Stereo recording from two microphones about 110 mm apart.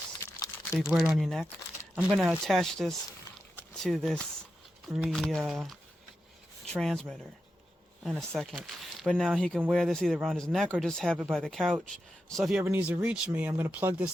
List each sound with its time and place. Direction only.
0.2 s crumpling: 30° left (ahead or behind)
0.8 s speech: 5° right (ahead or behind)
8.3 s speech: 5° left (ahead or behind)
12.6 s speech: 15° right (ahead or behind)